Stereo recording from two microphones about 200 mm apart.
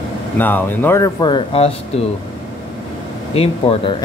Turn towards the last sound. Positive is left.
turn(degrees=30)  # may be behind; listen again after turning